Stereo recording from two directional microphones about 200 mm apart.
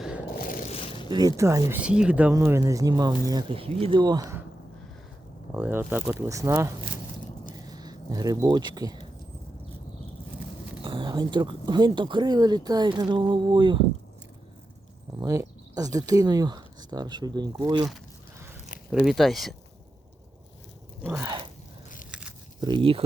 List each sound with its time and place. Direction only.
0.3 s a sound: 45° left (ahead or behind)
1.0 s speech: 20° right (ahead or behind)
5.5 s speech: 10° right (ahead or behind)
10.8 s speech: 25° right (ahead or behind)
15.2 s speech: 15° right (ahead or behind)
18.9 s speech: centre (ahead or behind)
21.2 s speech: 20° right (ahead or behind)
22.6 s speech: 25° right (ahead or behind)